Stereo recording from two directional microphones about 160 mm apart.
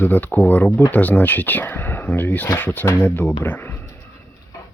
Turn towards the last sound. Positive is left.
turn(degrees=20)  # may be behind; listen again after turning